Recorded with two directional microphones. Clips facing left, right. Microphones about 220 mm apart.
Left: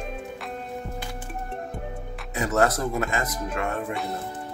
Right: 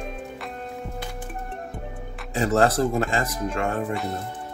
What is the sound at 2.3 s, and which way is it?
Speech, 30° right (ahead or behind).